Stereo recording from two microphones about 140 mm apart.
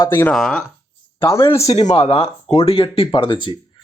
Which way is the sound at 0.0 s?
20° left (ahead or behind).